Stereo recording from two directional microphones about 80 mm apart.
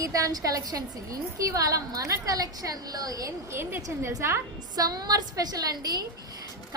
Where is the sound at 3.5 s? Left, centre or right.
Right.